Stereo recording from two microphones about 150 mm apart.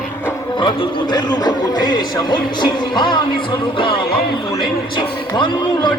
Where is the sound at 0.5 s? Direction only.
30° left (ahead or behind).